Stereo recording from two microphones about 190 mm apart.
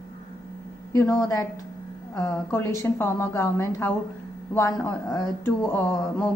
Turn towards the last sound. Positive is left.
turn(degrees=15)  # may be behind; listen again after turning